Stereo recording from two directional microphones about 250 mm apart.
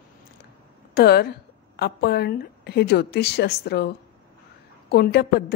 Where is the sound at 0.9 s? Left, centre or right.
Left.